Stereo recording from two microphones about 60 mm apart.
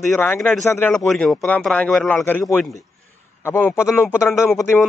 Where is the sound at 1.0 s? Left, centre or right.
Centre.